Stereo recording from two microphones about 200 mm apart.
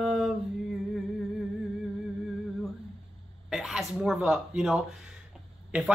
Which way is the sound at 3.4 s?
Centre (ahead or behind).